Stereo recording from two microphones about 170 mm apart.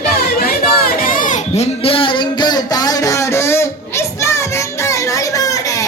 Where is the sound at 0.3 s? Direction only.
60° left (ahead or behind).